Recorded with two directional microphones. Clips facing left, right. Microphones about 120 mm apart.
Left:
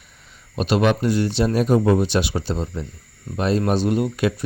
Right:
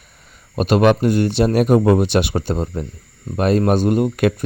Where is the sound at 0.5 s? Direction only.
50° right (ahead or behind).